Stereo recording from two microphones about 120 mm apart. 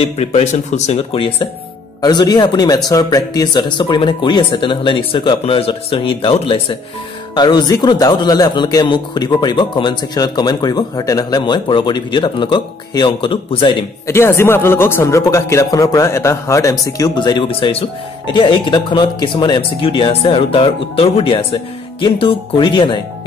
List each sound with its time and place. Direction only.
0.0 s speech: 65° left (ahead or behind)
1.1 s a man's voice: 45° left (ahead or behind)
7.3 s a man's voice: 35° left (ahead or behind)
14.0 s a man's voice: 20° left (ahead or behind); by 22.9 s 40° left (ahead or behind)